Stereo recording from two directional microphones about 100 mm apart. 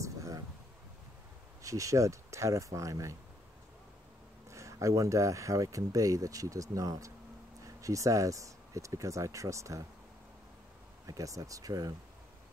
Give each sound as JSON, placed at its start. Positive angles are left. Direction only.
{"t": 0.0, "sound": "a sound", "side_deg": -30}
{"t": 1.6, "sound": "speech", "side_deg": -35}
{"t": 4.5, "sound": "speech", "side_deg": -30}
{"t": 11.1, "sound": "speech", "side_deg": -35}